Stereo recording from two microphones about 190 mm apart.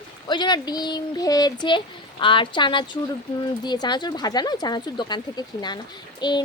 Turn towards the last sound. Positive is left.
turn(degrees=20)  # may be behind; listen again after turning